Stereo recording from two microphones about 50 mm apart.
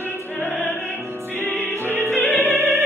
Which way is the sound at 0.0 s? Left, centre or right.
Left.